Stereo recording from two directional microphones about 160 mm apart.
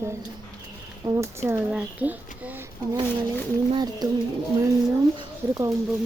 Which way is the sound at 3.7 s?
25° right (ahead or behind).